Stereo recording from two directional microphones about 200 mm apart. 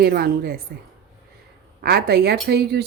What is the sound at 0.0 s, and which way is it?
Speech, 50° right (ahead or behind).